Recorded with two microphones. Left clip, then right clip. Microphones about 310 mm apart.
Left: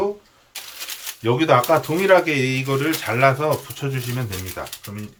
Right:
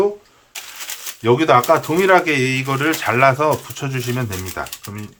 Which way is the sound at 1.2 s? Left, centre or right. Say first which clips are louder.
Right 3 dB; centre.